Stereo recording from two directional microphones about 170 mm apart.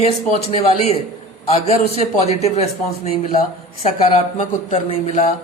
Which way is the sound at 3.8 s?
35° left (ahead or behind).